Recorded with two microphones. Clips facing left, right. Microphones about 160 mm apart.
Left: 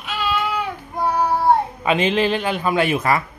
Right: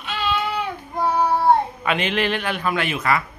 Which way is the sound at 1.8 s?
30° left (ahead or behind).